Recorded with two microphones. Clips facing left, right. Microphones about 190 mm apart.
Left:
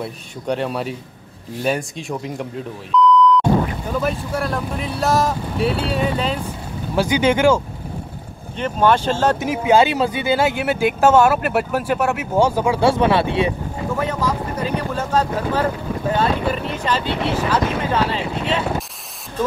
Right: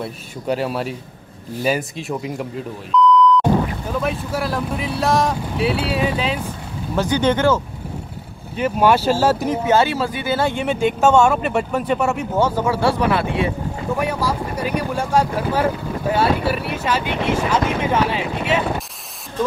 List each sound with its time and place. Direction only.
0.0 s speech: 5° right (ahead or behind)
7.0 s speech: 10° left (ahead or behind)
8.5 s speech: 10° right (ahead or behind)
9.5 s speech: 15° left (ahead or behind)
12.4 s speech: 15° left (ahead or behind)
13.9 s speech: 10° right (ahead or behind)